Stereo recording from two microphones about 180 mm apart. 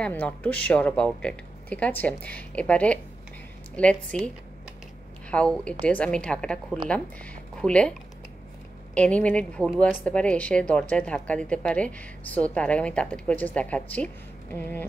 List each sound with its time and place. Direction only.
0.0 s speech: 10° left (ahead or behind)
5.3 s a woman's voice: 5° left (ahead or behind)
8.9 s speech: 5° left (ahead or behind)